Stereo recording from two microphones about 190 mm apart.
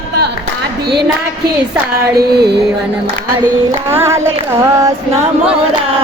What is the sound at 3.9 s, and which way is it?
Speech, 15° right (ahead or behind).